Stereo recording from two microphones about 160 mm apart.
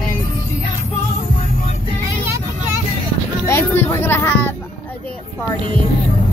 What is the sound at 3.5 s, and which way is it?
Speech, 15° left (ahead or behind).